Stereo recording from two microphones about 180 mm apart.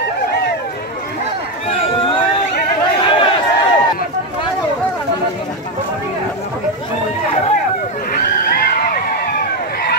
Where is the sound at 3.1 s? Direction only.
30° left (ahead or behind).